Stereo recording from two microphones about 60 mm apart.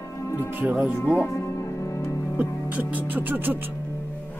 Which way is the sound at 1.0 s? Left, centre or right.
Left.